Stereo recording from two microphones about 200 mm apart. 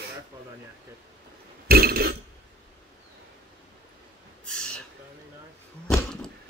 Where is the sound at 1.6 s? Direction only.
50° right (ahead or behind).